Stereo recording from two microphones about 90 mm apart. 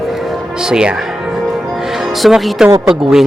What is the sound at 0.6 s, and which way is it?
Speech, 10° right (ahead or behind).